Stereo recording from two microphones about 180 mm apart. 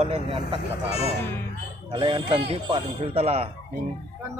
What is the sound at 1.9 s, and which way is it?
Speech, 30° right (ahead or behind).